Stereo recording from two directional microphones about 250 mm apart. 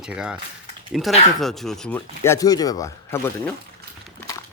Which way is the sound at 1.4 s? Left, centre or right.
Centre.